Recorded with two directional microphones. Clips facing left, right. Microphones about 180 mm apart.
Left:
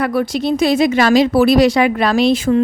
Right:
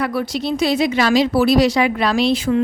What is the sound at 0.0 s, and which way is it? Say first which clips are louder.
Speech: left 4 dB; 50° left (ahead or behind).